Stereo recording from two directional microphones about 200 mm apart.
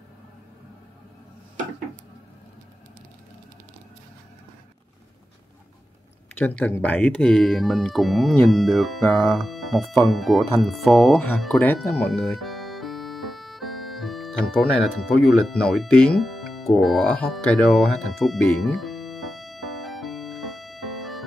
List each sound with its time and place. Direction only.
6.3 s speech: 10° left (ahead or behind)
10.1 s music: centre (ahead or behind)